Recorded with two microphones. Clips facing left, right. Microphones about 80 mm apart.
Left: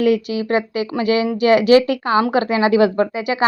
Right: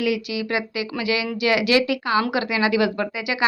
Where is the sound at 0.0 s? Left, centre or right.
Left.